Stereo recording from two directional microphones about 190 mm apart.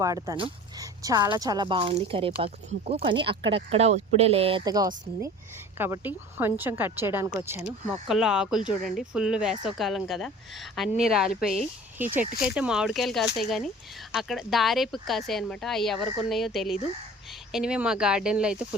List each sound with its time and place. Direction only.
0.0 s speech: 15° right (ahead or behind)
7.9 s speech: centre (ahead or behind)